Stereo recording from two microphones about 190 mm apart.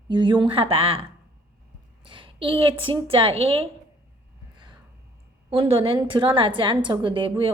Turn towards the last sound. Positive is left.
turn(degrees=-25)  # may be behind; listen again after turning